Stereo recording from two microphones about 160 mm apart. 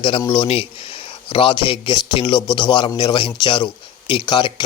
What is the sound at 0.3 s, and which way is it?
A man's voice, 35° left (ahead or behind).